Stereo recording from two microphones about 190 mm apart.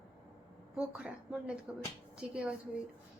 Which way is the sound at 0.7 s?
5° right (ahead or behind).